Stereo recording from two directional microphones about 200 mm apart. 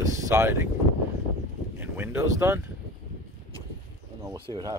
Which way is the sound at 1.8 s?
10° right (ahead or behind).